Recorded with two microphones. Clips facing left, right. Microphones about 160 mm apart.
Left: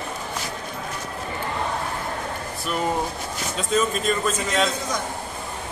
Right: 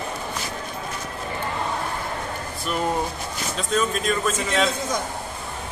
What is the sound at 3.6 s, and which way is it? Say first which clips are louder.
A man's voice: left 1 dB; centre (ahead or behind).